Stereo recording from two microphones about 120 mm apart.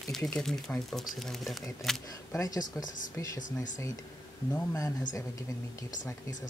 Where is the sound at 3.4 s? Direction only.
90° left.